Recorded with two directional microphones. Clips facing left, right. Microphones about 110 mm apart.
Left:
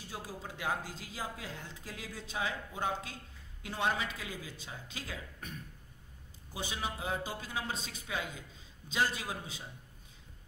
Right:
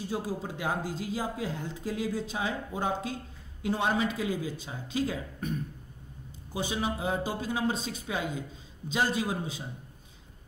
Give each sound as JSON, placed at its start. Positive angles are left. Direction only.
{"t": 0.1, "sound": "speech", "side_deg": -25}